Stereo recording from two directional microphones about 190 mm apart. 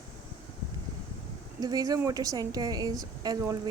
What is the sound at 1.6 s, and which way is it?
Speech, 20° right (ahead or behind).